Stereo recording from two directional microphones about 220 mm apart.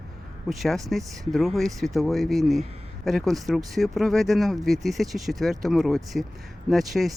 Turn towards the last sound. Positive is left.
turn(degrees=0)  # may be behind; listen again after turning